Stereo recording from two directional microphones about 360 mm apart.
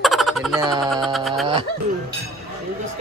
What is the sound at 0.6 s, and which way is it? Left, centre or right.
Speech, centre.